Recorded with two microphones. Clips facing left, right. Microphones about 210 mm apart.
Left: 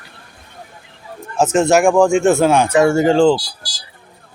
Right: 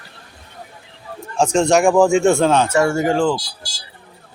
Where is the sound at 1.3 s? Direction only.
5° left (ahead or behind); by 3.4 s 25° left (ahead or behind).